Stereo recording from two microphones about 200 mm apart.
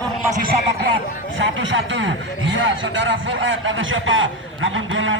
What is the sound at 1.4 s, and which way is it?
A man's voice, 70° right (ahead or behind).